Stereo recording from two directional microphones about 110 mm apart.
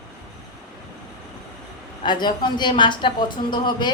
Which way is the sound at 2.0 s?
45° left (ahead or behind).